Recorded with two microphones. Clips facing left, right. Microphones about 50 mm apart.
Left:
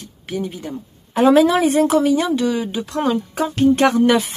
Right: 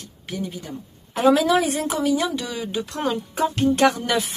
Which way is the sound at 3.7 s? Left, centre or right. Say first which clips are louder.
Left 5 dB; left.